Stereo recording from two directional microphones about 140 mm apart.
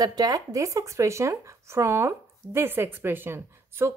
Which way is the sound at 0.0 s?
30° right (ahead or behind).